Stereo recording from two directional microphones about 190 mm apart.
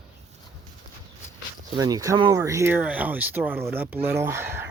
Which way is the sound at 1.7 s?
20° right (ahead or behind).